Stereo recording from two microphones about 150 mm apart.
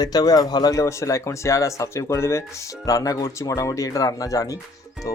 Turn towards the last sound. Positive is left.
turn(degrees=25)  # may be behind; listen again after turning